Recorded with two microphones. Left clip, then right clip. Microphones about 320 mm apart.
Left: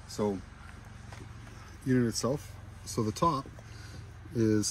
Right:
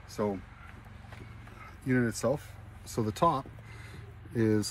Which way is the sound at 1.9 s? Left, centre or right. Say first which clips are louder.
Right 1 dB; centre.